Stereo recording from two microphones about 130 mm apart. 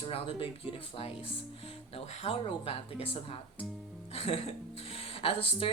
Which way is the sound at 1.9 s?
50° left (ahead or behind).